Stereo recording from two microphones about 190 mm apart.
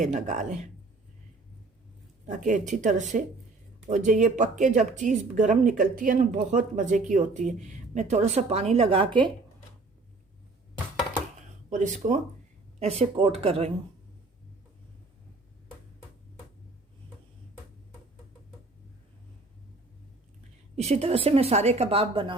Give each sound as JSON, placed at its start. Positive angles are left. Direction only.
{"t": 0.0, "sound": "speech", "side_deg": -40}
{"t": 2.2, "sound": "speech", "side_deg": -40}
{"t": 11.3, "sound": "a sound", "side_deg": -40}
{"t": 12.8, "sound": "speech", "side_deg": -35}
{"t": 20.7, "sound": "speech", "side_deg": -35}